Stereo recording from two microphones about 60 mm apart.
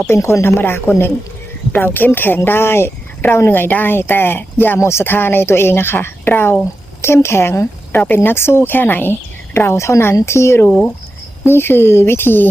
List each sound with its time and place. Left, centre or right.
0.0 s a woman's voice: left
4.8 s a woman's voice: left
7.9 s speech: left
9.6 s a woman's voice: left